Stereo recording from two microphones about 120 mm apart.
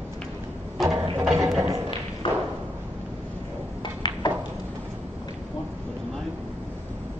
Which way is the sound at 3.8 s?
40° left (ahead or behind).